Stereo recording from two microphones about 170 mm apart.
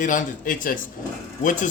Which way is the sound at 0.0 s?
50° left (ahead or behind).